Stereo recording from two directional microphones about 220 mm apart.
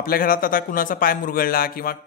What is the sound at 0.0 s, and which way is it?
A man's voice, 40° left (ahead or behind).